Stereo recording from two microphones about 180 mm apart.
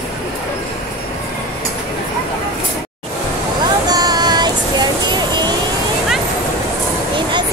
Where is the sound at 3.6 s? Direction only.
20° right (ahead or behind).